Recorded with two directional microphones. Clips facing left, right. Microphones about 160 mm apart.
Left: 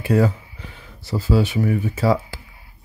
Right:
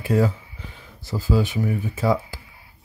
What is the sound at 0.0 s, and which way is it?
Speech, 70° left (ahead or behind).